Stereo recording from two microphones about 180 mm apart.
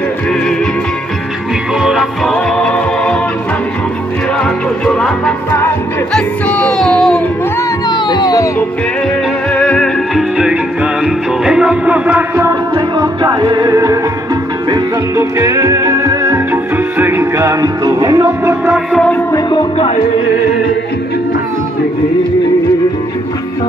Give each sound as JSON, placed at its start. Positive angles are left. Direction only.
{"t": 1.8, "sound": "music", "side_deg": 0}
{"t": 4.8, "sound": "music", "side_deg": 5}
{"t": 7.9, "sound": "music", "side_deg": 25}
{"t": 9.5, "sound": "music", "side_deg": 5}
{"t": 10.3, "sound": "music", "side_deg": -5}
{"t": 18.7, "sound": "music", "side_deg": 0}
{"t": 19.3, "sound": "speech", "side_deg": 25}